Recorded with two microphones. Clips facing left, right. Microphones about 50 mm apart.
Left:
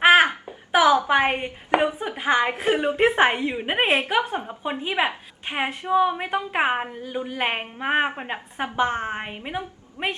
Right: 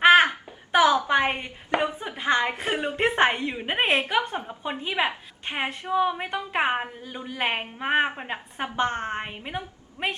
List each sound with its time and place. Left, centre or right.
0.0 s a sound: centre
1.4 s chopping: left
2.0 s a woman's voice: centre
4.1 s a woman's voice: centre